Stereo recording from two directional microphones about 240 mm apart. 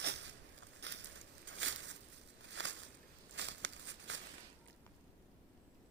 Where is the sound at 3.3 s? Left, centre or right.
Right.